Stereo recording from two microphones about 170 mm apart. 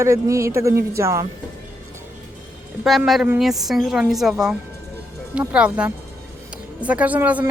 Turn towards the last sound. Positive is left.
turn(degrees=-10)  # may be behind; listen again after turning